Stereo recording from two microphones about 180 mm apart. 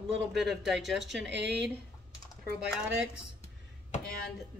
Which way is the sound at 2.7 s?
5° right (ahead or behind).